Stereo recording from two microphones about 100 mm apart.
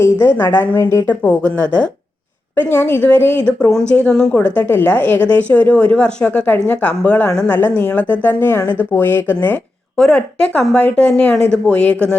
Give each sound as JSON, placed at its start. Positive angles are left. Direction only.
{"t": 0.0, "sound": "a woman's voice", "side_deg": 25}
{"t": 1.0, "sound": "speech", "side_deg": 15}
{"t": 10.0, "sound": "speech", "side_deg": 10}